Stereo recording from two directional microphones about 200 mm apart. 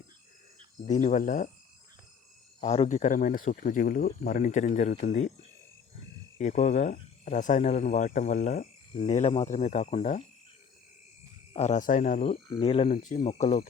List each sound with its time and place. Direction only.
0.9 s speech: 35° left (ahead or behind)
2.6 s speech: 30° left (ahead or behind)
6.4 s speech: 35° left (ahead or behind)
11.5 s speech: 35° left (ahead or behind)